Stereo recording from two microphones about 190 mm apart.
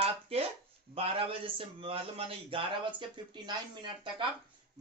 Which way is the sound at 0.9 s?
30° right (ahead or behind).